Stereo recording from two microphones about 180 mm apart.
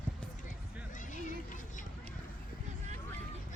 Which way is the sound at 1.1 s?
45° left (ahead or behind).